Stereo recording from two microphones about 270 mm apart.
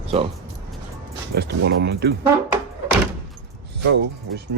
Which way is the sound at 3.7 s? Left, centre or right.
Right.